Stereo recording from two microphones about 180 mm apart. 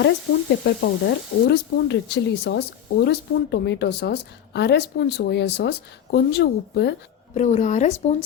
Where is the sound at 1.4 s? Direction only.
70° left (ahead or behind).